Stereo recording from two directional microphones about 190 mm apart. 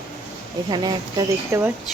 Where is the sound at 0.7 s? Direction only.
25° right (ahead or behind).